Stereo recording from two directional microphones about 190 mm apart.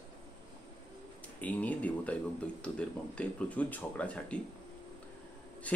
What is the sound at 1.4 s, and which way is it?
Speech, 10° left (ahead or behind).